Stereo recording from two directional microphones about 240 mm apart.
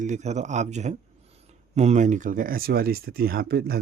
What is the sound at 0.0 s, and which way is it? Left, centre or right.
Speech, right.